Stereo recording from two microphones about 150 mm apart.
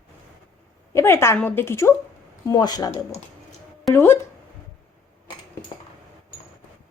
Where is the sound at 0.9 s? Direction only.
20° left (ahead or behind).